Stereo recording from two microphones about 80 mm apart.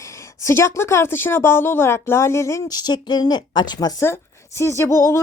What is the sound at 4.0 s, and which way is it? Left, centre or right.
Speech, left.